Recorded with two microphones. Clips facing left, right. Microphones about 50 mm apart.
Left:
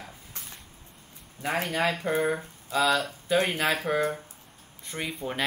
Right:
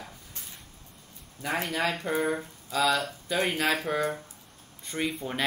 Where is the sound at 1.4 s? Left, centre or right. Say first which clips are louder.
Left 2 dB; left.